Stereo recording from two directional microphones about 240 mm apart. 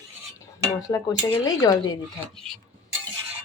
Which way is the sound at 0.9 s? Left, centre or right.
Centre.